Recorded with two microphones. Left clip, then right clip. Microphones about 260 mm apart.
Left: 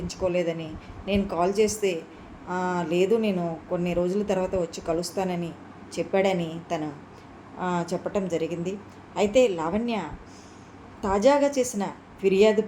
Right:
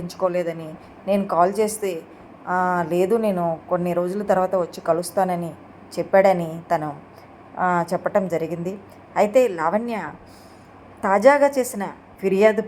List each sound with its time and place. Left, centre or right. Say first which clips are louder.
0.1 s speech: right 3 dB; centre